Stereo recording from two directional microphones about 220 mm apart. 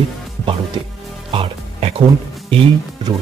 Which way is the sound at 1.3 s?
25° right (ahead or behind).